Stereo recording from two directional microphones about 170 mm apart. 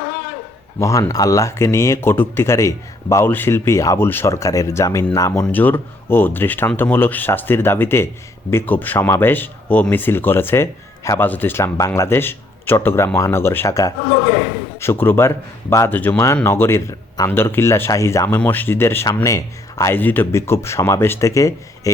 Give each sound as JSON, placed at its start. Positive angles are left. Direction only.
{"t": 0.8, "sound": "speech", "side_deg": 20}